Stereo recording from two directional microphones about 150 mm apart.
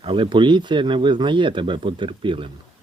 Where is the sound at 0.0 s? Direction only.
35° right (ahead or behind).